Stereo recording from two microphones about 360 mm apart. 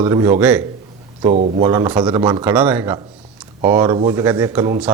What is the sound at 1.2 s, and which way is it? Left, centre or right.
A man's voice, centre.